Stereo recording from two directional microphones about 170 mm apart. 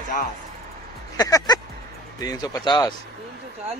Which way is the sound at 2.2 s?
20° left (ahead or behind).